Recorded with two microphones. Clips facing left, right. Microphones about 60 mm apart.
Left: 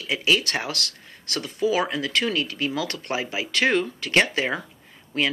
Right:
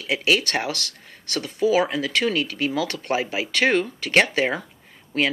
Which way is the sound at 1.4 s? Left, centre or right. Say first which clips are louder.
Right 3 dB; right.